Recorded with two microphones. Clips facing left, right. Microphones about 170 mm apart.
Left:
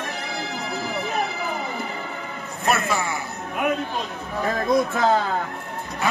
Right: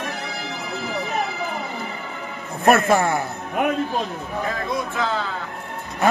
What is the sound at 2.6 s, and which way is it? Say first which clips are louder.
Speech: right 7 dB; 50° right (ahead or behind).